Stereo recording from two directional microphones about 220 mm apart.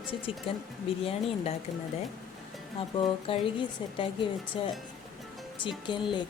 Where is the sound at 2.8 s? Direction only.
25° left (ahead or behind).